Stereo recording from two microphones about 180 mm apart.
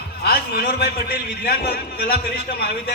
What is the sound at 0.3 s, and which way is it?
A man's voice, 60° left (ahead or behind).